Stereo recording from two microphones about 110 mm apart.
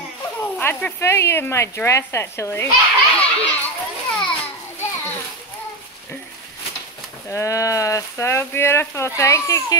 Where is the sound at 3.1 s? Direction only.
15° left (ahead or behind).